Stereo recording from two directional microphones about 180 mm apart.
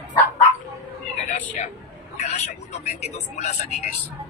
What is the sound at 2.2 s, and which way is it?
Speech, 35° left (ahead or behind).